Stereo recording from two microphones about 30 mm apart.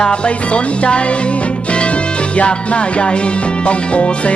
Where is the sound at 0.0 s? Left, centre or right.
Left.